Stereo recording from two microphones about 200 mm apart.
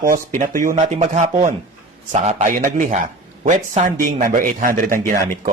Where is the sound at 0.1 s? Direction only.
40° right (ahead or behind).